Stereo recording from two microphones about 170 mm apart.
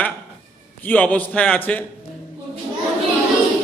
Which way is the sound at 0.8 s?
10° left (ahead or behind).